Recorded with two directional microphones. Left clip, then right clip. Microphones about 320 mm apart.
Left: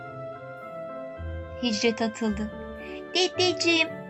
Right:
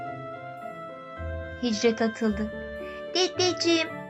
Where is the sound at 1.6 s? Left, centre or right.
Centre.